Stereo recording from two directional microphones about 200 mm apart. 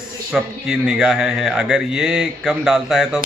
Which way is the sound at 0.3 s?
5° right (ahead or behind).